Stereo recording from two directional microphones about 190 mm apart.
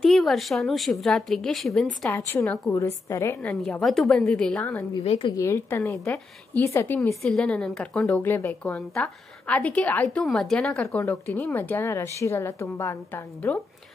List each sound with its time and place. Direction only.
0.0 s a woman's voice: centre (ahead or behind)
2.0 s speech: 10° left (ahead or behind)
3.4 s a woman's voice: 5° left (ahead or behind)
5.0 s a woman's voice: 30° left (ahead or behind)
5.3 s speech: 15° left (ahead or behind)